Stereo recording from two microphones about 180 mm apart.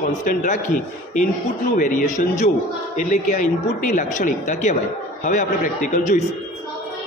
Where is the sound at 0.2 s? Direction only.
45° left (ahead or behind).